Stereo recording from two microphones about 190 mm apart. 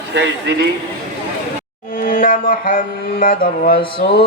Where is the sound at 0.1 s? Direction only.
65° right (ahead or behind).